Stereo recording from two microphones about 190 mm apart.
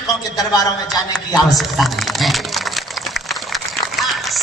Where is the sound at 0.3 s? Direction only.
20° left (ahead or behind).